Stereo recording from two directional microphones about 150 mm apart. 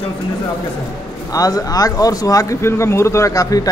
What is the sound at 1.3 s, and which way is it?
Speech, 25° left (ahead or behind).